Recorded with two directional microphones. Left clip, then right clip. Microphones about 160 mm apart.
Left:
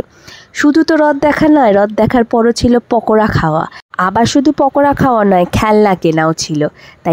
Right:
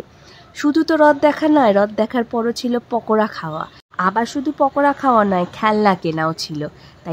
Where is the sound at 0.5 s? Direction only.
45° left (ahead or behind).